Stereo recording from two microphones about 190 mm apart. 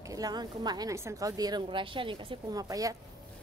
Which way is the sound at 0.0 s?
20° right (ahead or behind).